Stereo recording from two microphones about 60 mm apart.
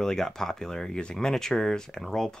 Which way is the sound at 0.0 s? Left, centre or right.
Centre.